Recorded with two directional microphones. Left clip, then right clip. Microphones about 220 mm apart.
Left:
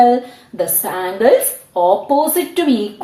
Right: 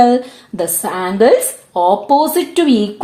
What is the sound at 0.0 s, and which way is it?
A woman's voice, 50° right (ahead or behind).